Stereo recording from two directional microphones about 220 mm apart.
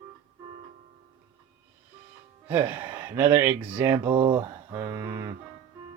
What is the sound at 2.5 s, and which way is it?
Speech, 10° right (ahead or behind).